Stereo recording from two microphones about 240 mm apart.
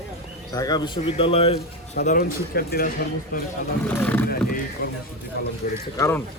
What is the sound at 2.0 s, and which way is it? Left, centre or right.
Speech, left.